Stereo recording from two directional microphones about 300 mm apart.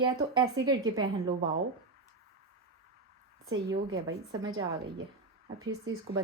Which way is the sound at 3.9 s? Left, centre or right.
Centre.